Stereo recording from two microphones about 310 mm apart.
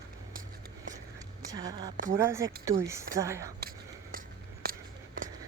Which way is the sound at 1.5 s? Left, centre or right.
Centre.